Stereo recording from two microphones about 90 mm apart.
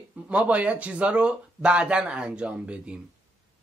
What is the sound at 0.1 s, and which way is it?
Speech, 15° right (ahead or behind).